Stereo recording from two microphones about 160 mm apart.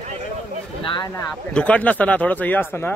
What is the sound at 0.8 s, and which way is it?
Speech, 30° left (ahead or behind).